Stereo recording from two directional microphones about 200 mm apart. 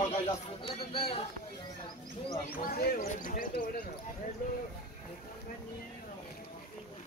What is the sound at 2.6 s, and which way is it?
Speech, 45° left (ahead or behind).